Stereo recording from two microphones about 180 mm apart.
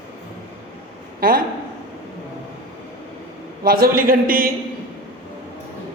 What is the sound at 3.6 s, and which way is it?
Speech, 50° right (ahead or behind).